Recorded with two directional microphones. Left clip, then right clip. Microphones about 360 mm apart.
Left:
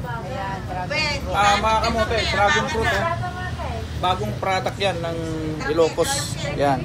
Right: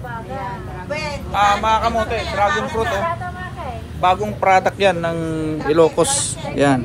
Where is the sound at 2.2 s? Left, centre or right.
Centre.